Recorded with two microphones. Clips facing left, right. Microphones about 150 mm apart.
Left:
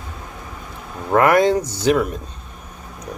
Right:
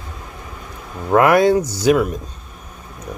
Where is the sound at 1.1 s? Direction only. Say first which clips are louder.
Right 2 dB; 10° right (ahead or behind).